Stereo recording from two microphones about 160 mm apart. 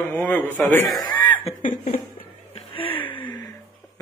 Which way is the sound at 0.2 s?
5° left (ahead or behind).